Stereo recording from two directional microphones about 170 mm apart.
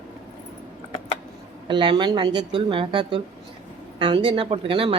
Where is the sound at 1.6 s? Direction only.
30° right (ahead or behind).